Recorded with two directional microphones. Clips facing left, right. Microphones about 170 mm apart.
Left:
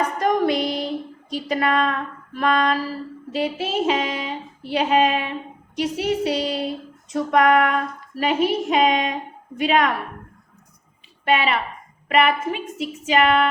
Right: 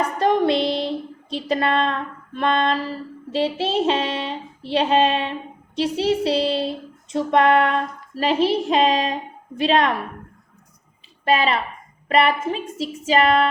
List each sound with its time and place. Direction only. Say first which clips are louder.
0.2 s a sound: right 3 dB; 25° right (ahead or behind)
3.3 s child singing: right 2 dB; 30° right (ahead or behind)
9.6 s a woman's voice: right 1 dB; 30° right (ahead or behind)
11.3 s a woman's voice: right 1 dB; 35° right (ahead or behind)